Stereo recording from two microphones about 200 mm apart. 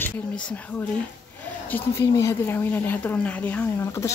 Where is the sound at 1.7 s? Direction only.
15° left (ahead or behind).